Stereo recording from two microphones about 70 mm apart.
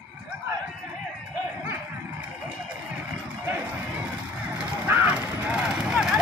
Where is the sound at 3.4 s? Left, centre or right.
Right.